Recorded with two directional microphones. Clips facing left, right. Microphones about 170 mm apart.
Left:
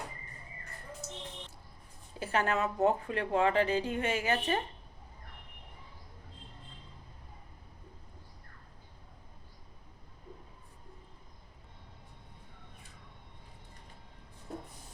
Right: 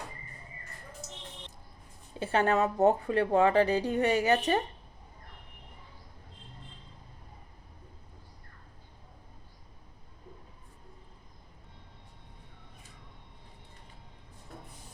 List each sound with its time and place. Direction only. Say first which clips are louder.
2.1 s a woman's voice: right 5 dB; 30° right (ahead or behind)